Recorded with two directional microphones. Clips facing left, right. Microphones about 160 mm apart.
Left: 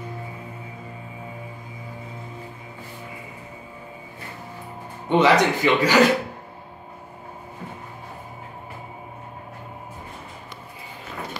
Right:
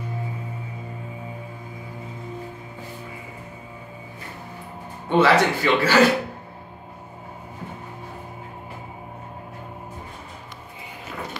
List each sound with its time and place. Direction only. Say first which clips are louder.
5.1 s speech: even; 15° left (ahead or behind)